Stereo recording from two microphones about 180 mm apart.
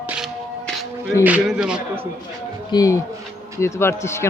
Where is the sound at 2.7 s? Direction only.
20° left (ahead or behind).